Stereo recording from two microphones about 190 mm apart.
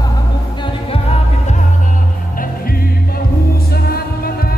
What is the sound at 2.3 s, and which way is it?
Music, 50° left (ahead or behind).